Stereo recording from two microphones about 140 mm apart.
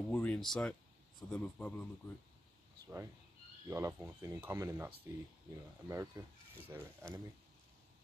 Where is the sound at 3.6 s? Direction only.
20° right (ahead or behind).